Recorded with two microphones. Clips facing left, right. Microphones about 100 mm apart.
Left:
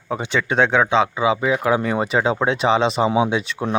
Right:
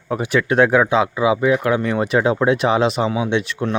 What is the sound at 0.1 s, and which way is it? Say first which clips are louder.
Speech: right 3 dB; 5° right (ahead or behind).